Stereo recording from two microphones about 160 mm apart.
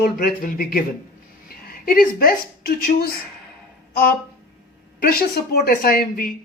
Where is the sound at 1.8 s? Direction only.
65° left (ahead or behind).